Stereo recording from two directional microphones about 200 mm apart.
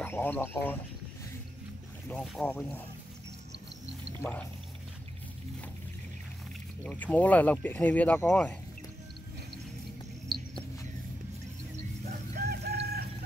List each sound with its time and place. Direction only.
0.0 s speech: 10° left (ahead or behind)
2.0 s speech: 5° left (ahead or behind)
4.2 s speech: 10° left (ahead or behind)
6.8 s speech: 10° left (ahead or behind)
10.3 s a sound: 50° right (ahead or behind)
12.4 s crowing: 55° right (ahead or behind)